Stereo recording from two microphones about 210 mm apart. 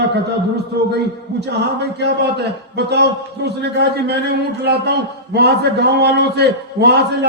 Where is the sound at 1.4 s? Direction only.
55° right (ahead or behind).